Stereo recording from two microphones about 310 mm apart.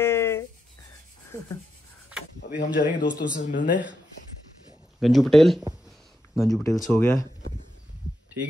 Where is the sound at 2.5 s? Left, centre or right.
Left.